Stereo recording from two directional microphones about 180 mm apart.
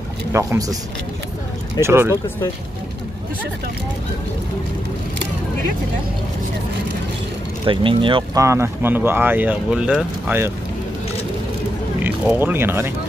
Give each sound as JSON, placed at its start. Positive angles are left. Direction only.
{"t": 0.3, "sound": "speech", "side_deg": -15}
{"t": 1.8, "sound": "speech", "side_deg": -15}
{"t": 7.6, "sound": "speech", "side_deg": -25}
{"t": 8.4, "sound": "speech", "side_deg": -15}
{"t": 12.0, "sound": "speech", "side_deg": -10}